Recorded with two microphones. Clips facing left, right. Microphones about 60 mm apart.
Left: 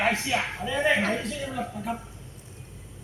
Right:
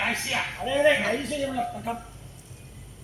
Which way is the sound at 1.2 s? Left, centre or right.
Centre.